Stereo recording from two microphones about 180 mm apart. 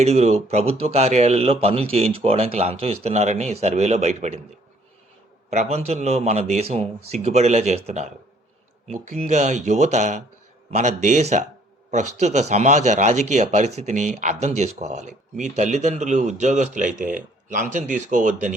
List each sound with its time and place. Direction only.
0.0 s speech: 35° right (ahead or behind)
5.5 s speech: 40° right (ahead or behind)